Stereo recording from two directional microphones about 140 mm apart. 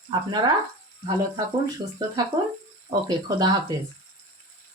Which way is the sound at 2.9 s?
30° right (ahead or behind).